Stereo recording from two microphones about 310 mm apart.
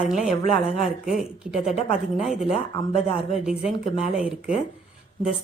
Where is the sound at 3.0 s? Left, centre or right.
Centre.